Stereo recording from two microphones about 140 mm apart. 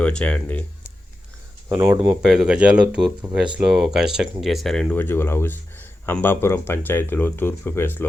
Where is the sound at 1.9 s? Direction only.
30° right (ahead or behind).